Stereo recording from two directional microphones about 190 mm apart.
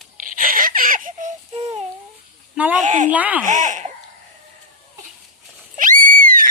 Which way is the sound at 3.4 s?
40° right (ahead or behind).